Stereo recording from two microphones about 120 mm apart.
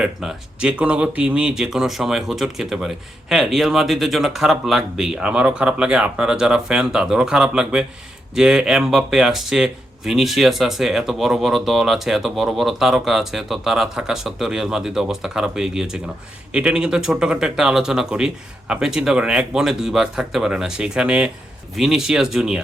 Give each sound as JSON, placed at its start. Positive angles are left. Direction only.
{"t": 0.0, "sound": "speech", "side_deg": -5}